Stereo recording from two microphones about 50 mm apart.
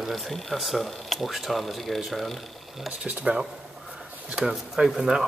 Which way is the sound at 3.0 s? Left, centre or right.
Right.